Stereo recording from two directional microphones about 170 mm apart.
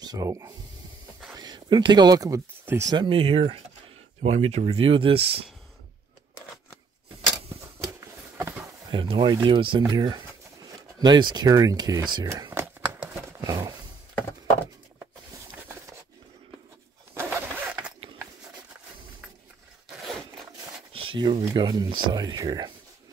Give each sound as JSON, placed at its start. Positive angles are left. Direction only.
{"t": 0.0, "sound": "speech", "side_deg": -20}
{"t": 3.1, "sound": "speech", "side_deg": -35}
{"t": 8.9, "sound": "speech", "side_deg": -30}
{"t": 12.8, "sound": "a sound", "side_deg": -15}
{"t": 17.1, "sound": "a sound", "side_deg": -15}
{"t": 19.9, "sound": "zipper", "side_deg": 0}
{"t": 20.9, "sound": "speech", "side_deg": -30}